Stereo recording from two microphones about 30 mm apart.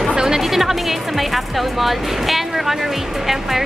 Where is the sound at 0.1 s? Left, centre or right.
Right.